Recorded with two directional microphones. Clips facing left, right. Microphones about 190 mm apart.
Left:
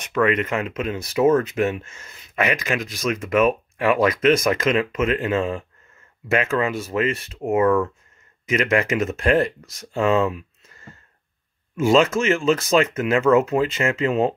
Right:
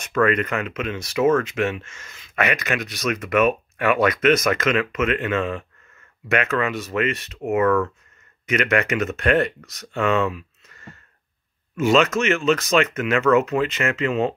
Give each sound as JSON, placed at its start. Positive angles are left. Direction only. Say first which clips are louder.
{"t": 0.0, "sound": "speech", "louder": "even", "side_deg": 20}
{"t": 3.1, "sound": "speech", "louder": "left 1 dB", "side_deg": 30}
{"t": 11.7, "sound": "speech", "louder": "left 1 dB", "side_deg": 30}